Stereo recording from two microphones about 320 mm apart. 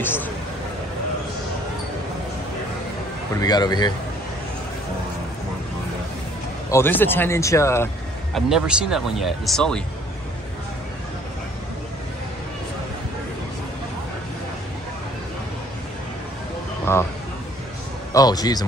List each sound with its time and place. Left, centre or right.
0.0 s speech: centre
3.3 s speech: centre
6.7 s speech: centre
18.1 s speech: centre